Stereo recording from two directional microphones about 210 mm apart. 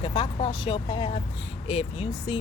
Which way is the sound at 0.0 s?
25° left (ahead or behind).